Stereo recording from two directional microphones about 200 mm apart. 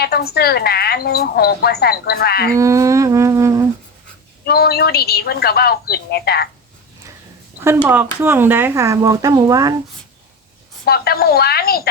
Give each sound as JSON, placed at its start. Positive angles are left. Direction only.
{"t": 0.0, "sound": "a woman's voice", "side_deg": 50}
{"t": 2.6, "sound": "speech", "side_deg": -15}
{"t": 4.4, "sound": "a woman's voice", "side_deg": 50}
{"t": 7.6, "sound": "speech", "side_deg": -10}
{"t": 10.8, "sound": "a woman's voice", "side_deg": 50}